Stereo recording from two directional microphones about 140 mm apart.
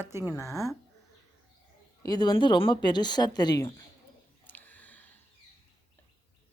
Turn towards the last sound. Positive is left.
turn(degrees=10)  # may be behind; listen again after turning